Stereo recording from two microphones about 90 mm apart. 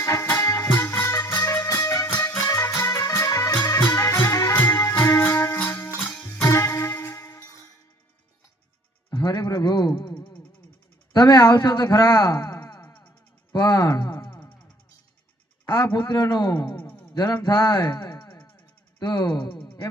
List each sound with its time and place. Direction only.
0.0 s music: 35° left (ahead or behind)
1.6 s music: 35° left (ahead or behind)
9.0 s a sound: 45° left (ahead or behind)
11.1 s speech: 50° left (ahead or behind)
15.6 s a man's voice: 40° left (ahead or behind)
17.5 s speech: 35° left (ahead or behind)
17.8 s a sound: 45° left (ahead or behind)
18.3 s a sound: 20° left (ahead or behind)
18.9 s a man's voice: 45° left (ahead or behind)
19.5 s music: 60° left (ahead or behind)